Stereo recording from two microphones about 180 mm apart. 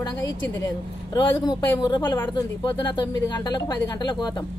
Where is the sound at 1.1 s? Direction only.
20° left (ahead or behind).